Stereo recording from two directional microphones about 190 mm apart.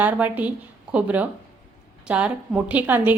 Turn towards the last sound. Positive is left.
turn(degrees=-10)  # may be behind; listen again after turning